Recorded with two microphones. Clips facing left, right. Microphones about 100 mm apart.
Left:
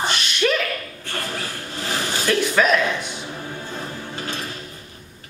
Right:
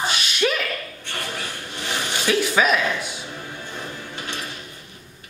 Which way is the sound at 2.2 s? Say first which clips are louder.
Left 1 dB; 5° right (ahead or behind).